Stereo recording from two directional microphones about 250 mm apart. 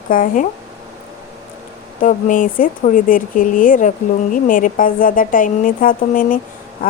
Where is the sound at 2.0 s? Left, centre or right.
Left.